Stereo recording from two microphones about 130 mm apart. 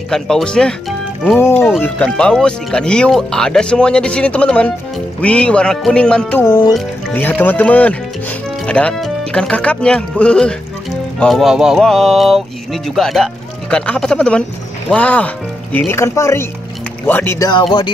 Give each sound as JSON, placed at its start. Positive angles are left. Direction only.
{"t": 0.1, "sound": "speech", "side_deg": 5}
{"t": 1.4, "sound": "speech", "side_deg": 20}
{"t": 17.4, "sound": "speech", "side_deg": 35}